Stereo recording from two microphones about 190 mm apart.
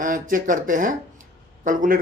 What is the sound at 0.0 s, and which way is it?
Speech, 45° right (ahead or behind).